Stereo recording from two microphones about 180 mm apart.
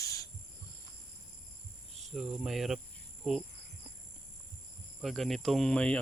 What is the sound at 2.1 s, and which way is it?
Cricket, centre (ahead or behind).